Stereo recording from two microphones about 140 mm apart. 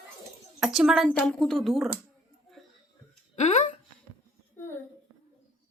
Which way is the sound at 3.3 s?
55° left (ahead or behind).